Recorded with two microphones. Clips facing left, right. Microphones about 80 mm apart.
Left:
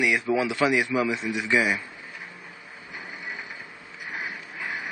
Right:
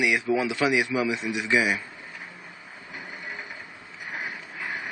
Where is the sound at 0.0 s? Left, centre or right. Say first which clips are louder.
Even; centre.